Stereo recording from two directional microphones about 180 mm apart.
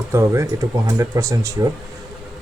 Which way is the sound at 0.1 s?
15° right (ahead or behind).